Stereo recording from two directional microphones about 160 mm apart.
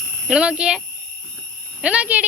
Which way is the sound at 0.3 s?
5° right (ahead or behind).